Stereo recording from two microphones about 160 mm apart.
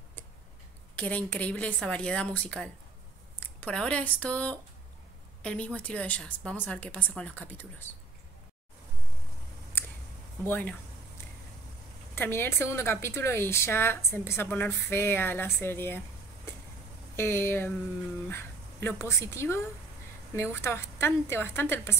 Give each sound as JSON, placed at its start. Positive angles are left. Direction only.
{"t": 0.9, "sound": "speech", "side_deg": 10}
{"t": 10.4, "sound": "speech", "side_deg": 10}
{"t": 12.2, "sound": "speech", "side_deg": 15}
{"t": 17.1, "sound": "speech", "side_deg": 15}
{"t": 20.6, "sound": "speech", "side_deg": 15}